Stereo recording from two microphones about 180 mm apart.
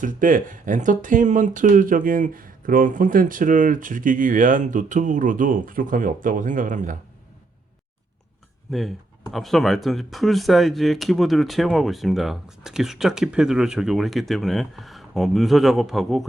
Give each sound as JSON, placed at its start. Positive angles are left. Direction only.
{"t": 0.0, "sound": "speech", "side_deg": -50}
{"t": 8.7, "sound": "speech", "side_deg": 0}